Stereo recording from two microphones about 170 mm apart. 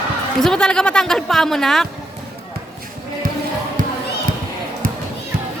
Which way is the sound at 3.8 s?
50° right (ahead or behind).